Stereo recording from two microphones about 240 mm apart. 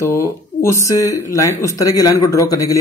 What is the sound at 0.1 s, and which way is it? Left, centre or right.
Speech, centre.